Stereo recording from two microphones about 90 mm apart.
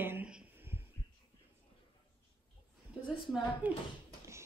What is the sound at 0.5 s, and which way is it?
Heart sounds, 25° right (ahead or behind).